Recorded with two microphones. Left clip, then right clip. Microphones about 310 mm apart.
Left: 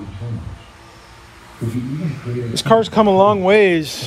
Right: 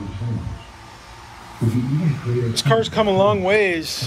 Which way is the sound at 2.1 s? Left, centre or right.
Left.